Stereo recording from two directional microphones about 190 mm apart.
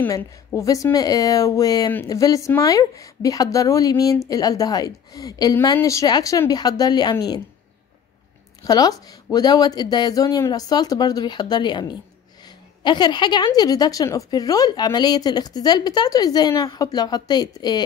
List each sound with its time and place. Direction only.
0.0 s a woman's voice: 10° left (ahead or behind)
8.6 s a woman's voice: 20° left (ahead or behind)